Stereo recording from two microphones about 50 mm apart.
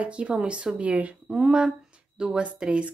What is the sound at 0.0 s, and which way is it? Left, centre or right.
Speech, right.